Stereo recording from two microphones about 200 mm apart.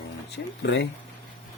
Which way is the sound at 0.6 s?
60° left (ahead or behind).